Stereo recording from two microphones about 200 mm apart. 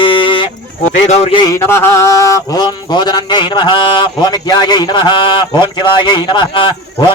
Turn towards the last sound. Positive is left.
turn(degrees=25)  # may be behind; listen again after turning